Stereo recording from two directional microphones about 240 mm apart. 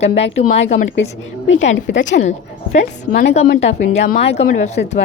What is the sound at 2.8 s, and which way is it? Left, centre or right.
Speech, left.